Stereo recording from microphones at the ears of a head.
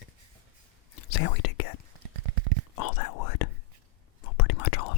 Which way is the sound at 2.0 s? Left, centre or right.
Right.